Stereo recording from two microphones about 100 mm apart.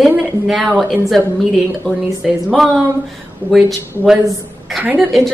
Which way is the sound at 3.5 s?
Centre (ahead or behind).